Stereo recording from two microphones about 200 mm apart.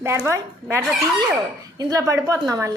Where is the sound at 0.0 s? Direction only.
15° right (ahead or behind).